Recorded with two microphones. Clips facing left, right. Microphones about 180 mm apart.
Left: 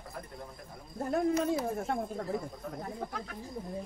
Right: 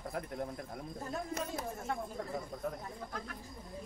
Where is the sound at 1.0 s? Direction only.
60° left (ahead or behind).